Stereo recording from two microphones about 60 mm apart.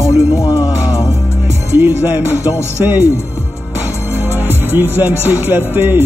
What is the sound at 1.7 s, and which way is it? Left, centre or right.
Speech, right.